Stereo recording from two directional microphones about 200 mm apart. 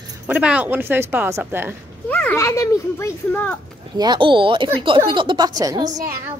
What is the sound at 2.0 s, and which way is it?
A child's voice, 10° left (ahead or behind).